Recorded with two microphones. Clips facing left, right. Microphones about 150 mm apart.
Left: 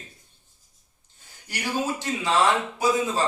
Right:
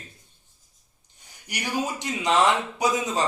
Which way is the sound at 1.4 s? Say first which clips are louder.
Left 1 dB; 15° right (ahead or behind).